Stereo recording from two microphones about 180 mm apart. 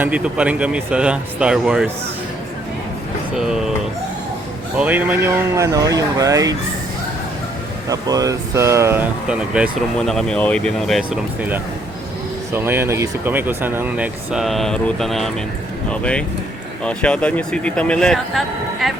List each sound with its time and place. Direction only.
0.0 s speech: 5° right (ahead or behind)
3.3 s speech: 5° right (ahead or behind)
4.8 s speech: 10° right (ahead or behind)
7.9 s speech: 20° right (ahead or behind)
10.1 s speech: 5° left (ahead or behind)
11.3 s speech: 10° right (ahead or behind)